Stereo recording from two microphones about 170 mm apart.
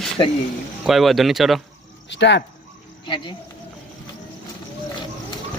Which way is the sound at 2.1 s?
90° left.